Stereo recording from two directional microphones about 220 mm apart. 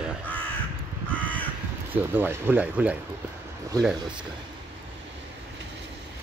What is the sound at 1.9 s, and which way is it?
Speech, 10° right (ahead or behind).